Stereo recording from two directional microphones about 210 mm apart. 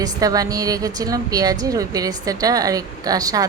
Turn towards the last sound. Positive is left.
turn(degrees=-15)  # may be behind; listen again after turning